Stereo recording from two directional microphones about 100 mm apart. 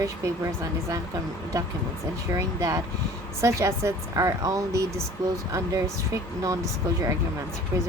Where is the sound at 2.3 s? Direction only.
35° right (ahead or behind).